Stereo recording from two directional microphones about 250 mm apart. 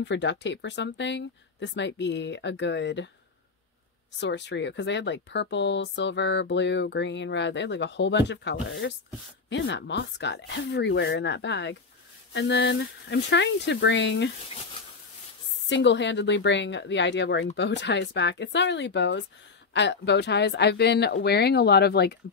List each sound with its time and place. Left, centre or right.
0.0 s speech: left
4.2 s speech: left
15.7 s a woman's voice: left